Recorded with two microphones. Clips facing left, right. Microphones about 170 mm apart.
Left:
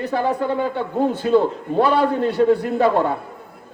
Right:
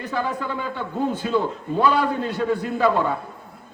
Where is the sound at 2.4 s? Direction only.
35° left (ahead or behind).